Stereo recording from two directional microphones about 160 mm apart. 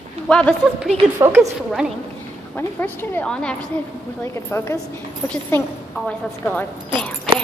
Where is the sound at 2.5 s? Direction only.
10° left (ahead or behind).